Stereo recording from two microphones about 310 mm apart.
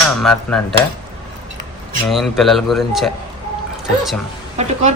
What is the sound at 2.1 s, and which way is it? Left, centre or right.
Speech, centre.